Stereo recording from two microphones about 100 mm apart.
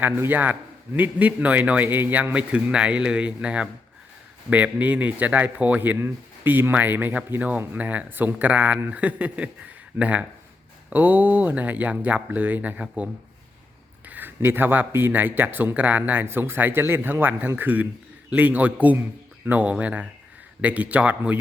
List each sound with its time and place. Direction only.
0.0 s speech: 20° right (ahead or behind)